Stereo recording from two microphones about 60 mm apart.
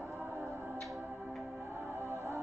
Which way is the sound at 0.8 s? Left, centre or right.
Centre.